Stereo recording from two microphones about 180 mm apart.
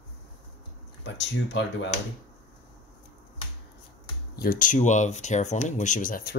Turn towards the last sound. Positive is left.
turn(degrees=55)  # may be behind; listen again after turning